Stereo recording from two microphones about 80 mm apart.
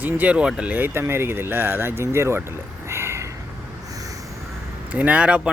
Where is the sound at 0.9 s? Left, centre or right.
Right.